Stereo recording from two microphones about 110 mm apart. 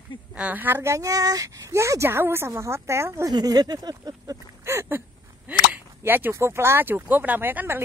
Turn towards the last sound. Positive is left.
turn(degrees=-15)  # may be behind; listen again after turning